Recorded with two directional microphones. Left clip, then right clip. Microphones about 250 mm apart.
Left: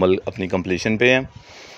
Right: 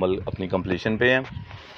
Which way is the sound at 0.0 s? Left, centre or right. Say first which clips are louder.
Left 6 dB; left.